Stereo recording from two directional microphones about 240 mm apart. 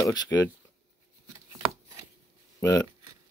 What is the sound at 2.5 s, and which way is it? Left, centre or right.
Speech, centre.